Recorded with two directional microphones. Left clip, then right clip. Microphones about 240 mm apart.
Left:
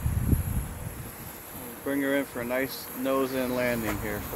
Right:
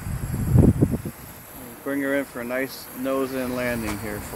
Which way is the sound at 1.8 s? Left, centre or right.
Right.